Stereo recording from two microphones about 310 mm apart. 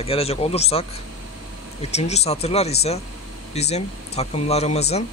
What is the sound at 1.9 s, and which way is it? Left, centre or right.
Speech, left.